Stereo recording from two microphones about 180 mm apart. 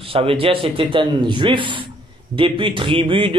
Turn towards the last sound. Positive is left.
turn(degrees=-30)  # may be behind; listen again after turning